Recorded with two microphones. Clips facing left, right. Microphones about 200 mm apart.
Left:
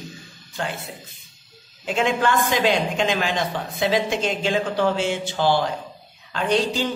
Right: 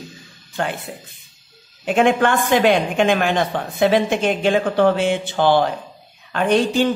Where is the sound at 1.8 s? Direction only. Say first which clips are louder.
Right 5 dB; 55° right (ahead or behind).